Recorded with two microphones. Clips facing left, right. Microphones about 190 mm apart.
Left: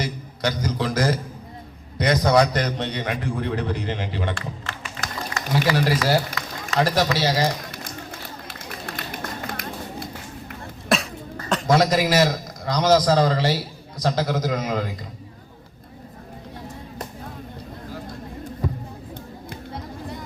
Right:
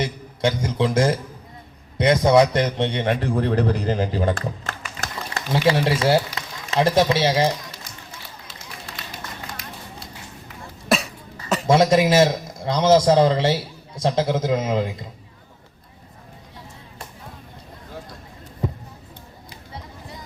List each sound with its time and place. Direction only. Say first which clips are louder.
0.0 s a man's voice: right 3 dB; 25° right (ahead or behind); by 4.7 s 40° right (ahead or behind)
5.3 s a man's voice: right 3 dB; 25° right (ahead or behind)
7.7 s run: left 6 dB; 55° left (ahead or behind)
10.8 s cough: right 1 dB; centre (ahead or behind)
11.7 s a man's voice: right 3 dB; 25° right (ahead or behind)
19.5 s music: left 5 dB; 55° left (ahead or behind)